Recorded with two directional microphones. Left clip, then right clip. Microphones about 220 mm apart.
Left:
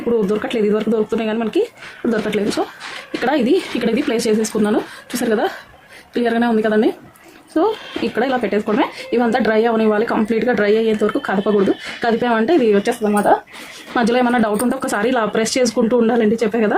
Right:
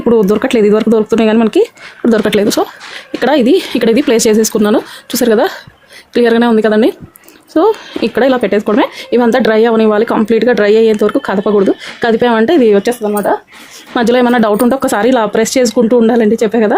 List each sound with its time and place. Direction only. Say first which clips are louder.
0.1 s speech: right 8 dB; 45° right (ahead or behind)